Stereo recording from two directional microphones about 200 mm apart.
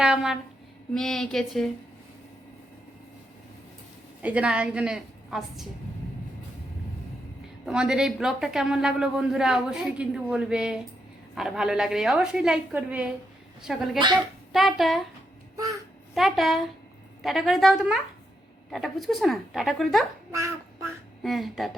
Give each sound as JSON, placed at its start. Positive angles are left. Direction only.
{"t": 0.0, "sound": "a woman's voice", "side_deg": -5}
{"t": 4.2, "sound": "a man's voice", "side_deg": -5}
{"t": 7.6, "sound": "a man's voice", "side_deg": -5}
{"t": 15.5, "sound": "babbling", "side_deg": -15}
{"t": 16.1, "sound": "a man's voice", "side_deg": 0}
{"t": 20.3, "sound": "a sound", "side_deg": -15}
{"t": 21.2, "sound": "a man's voice", "side_deg": 0}